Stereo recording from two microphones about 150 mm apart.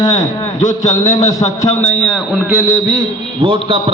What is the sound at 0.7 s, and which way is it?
Speech, 20° left (ahead or behind).